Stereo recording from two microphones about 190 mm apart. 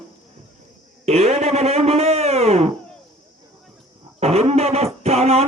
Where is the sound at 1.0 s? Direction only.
35° right (ahead or behind).